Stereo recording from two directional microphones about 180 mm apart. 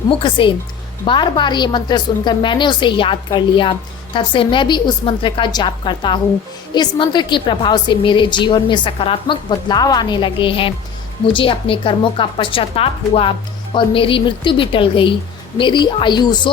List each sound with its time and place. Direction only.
0.1 s a woman's voice: 25° left (ahead or behind)